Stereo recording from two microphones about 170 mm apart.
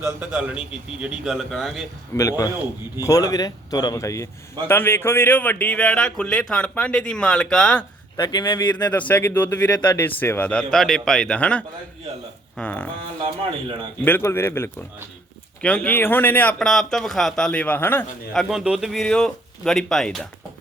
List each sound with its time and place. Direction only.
0.2 s speech: 10° right (ahead or behind)
2.1 s speech: 20° left (ahead or behind)
8.1 s speech: 20° left (ahead or behind)
8.7 s speech: 10° left (ahead or behind)
14.0 s speech: 15° left (ahead or behind)
18.3 s speech: centre (ahead or behind)